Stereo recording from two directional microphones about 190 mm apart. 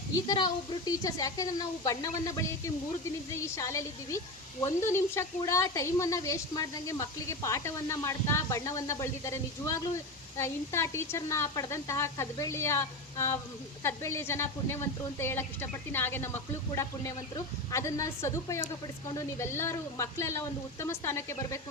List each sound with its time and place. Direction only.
0.3 s a woman's voice: 20° left (ahead or behind)
3.4 s speech: 15° left (ahead or behind)